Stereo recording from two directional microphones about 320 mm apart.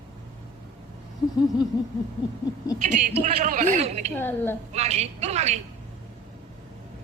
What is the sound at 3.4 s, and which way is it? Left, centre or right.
Speech, right.